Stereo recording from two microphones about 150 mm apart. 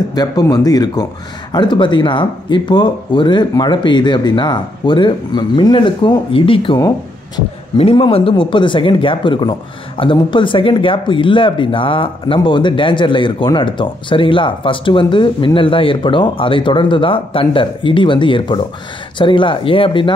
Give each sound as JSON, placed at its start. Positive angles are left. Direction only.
{"t": 0.1, "sound": "speech", "side_deg": 25}